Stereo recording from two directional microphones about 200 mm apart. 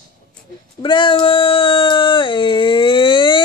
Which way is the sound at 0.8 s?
25° left (ahead or behind).